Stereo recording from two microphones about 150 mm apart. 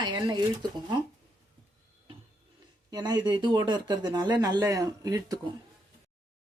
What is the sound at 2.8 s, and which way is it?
Speech, 30° right (ahead or behind).